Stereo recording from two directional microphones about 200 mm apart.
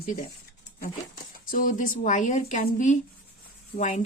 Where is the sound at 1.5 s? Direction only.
45° left (ahead or behind).